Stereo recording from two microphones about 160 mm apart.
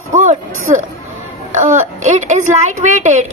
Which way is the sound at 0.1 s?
50° right (ahead or behind).